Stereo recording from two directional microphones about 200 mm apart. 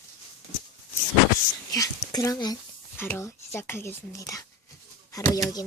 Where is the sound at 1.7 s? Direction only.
15° left (ahead or behind).